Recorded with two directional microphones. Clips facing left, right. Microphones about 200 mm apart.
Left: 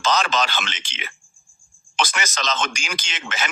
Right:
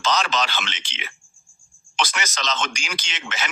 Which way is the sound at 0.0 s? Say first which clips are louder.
Left 2 dB; 50° left (ahead or behind).